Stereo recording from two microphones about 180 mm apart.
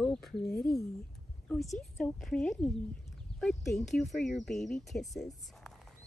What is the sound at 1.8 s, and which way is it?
Speech, centre (ahead or behind).